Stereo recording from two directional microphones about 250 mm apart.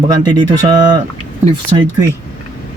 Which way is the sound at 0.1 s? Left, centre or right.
Centre.